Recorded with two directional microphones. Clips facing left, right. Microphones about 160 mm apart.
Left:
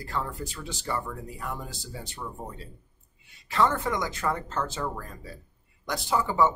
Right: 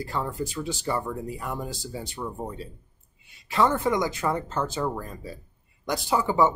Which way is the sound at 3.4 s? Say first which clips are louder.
Right 3 dB; 15° right (ahead or behind).